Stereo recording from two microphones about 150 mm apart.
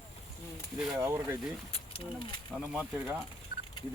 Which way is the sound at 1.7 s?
35° left (ahead or behind).